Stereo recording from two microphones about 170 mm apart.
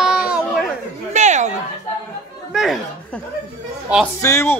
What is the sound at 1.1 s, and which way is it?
Speech, 45° right (ahead or behind).